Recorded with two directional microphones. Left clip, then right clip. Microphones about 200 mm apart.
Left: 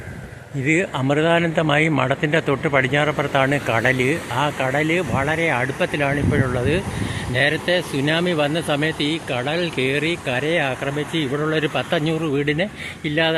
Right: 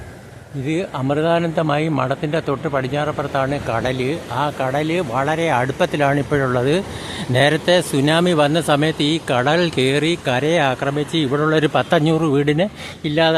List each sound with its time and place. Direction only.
0.6 s speech: centre (ahead or behind); by 13.3 s 20° right (ahead or behind)